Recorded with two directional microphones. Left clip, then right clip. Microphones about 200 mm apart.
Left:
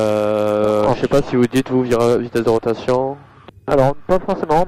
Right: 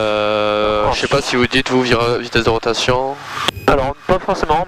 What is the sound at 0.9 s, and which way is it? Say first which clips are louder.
Speech: right 1 dB; 10° right (ahead or behind).